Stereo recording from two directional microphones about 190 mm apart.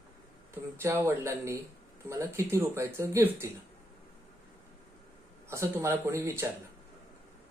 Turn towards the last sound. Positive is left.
turn(degrees=-15)  # may be behind; listen again after turning